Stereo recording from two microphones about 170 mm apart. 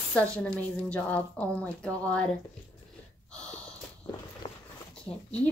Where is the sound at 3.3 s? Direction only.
5° left (ahead or behind).